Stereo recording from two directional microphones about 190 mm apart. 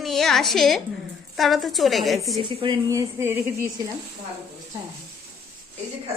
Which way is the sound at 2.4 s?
25° right (ahead or behind).